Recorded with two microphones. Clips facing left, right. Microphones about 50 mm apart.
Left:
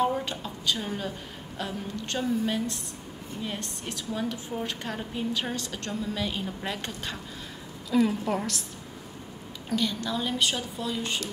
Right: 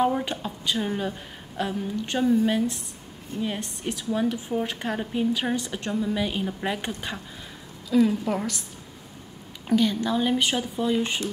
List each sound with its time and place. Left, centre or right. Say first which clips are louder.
0.0 s a woman's voice: right 3 dB; centre
7.9 s a woman's voice: right 3 dB; centre
9.7 s speech: right 6 dB; right